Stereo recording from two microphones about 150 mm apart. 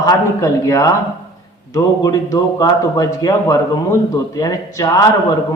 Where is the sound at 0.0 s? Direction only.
25° left (ahead or behind).